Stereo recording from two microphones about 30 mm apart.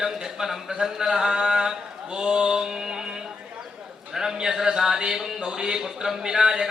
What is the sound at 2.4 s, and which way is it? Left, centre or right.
Speech, right.